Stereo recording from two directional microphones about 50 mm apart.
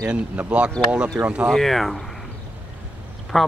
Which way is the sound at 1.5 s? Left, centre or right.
Centre.